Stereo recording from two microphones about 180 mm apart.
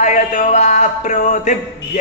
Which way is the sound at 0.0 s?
45° left (ahead or behind).